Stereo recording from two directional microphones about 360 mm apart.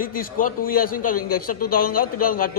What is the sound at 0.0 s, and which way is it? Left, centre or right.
A man's voice, left.